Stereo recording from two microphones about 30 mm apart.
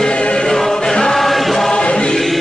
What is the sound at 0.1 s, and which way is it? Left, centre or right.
Choir, left.